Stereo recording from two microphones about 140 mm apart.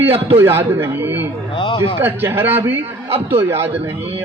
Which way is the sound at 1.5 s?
40° left (ahead or behind).